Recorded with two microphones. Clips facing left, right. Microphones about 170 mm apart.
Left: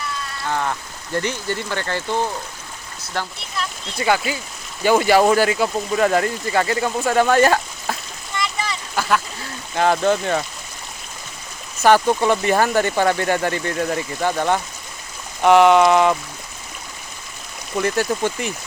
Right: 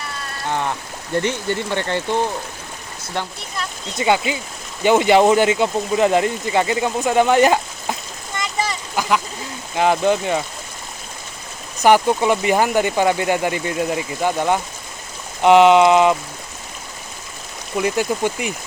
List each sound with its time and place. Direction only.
1.2 s speech: 20° right (ahead or behind)
3.1 s speech: 20° right (ahead or behind)
9.0 s duck: 15° right (ahead or behind)
9.7 s speech: 15° right (ahead or behind)
11.8 s speech: 15° right (ahead or behind)
17.7 s speech: 15° right (ahead or behind)